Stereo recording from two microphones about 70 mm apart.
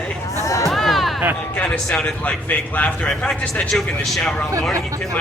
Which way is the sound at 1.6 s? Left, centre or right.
Centre.